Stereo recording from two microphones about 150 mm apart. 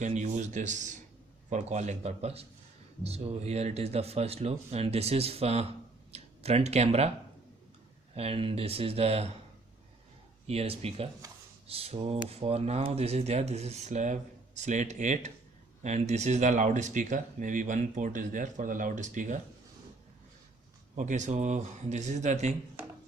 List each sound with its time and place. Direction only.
0.0 s speech: 55° right (ahead or behind)
8.1 s speech: 40° right (ahead or behind)
10.4 s speech: 40° right (ahead or behind)
20.9 s speech: 55° right (ahead or behind)